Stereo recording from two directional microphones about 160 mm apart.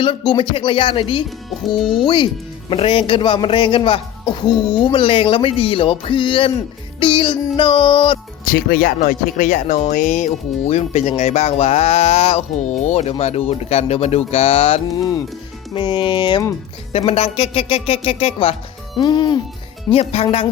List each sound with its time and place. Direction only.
0.0 s speech: 30° left (ahead or behind)
1.6 s speech: centre (ahead or behind)
2.0 s speech: 30° left (ahead or behind)
8.4 s speech: 65° left (ahead or behind); by 14.8 s 40° left (ahead or behind)
14.9 s music: 25° left (ahead or behind)
15.7 s speech: 30° left (ahead or behind)
18.9 s music: 30° left (ahead or behind)
19.9 s speech: 35° left (ahead or behind)